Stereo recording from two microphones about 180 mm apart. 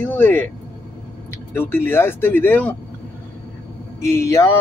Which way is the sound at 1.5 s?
10° left (ahead or behind).